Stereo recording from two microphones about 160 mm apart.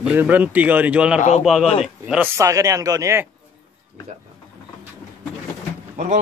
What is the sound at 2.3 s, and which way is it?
Speech, 20° right (ahead or behind).